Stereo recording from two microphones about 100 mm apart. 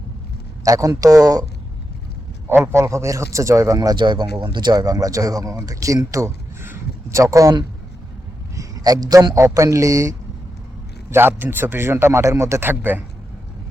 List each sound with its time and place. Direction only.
0.6 s a man's voice: 35° right (ahead or behind)
2.5 s a man's voice: 25° right (ahead or behind)
8.5 s a sound: 40° right (ahead or behind)
9.3 s a man's voice: 30° right (ahead or behind)
11.1 s a man's voice: 20° right (ahead or behind)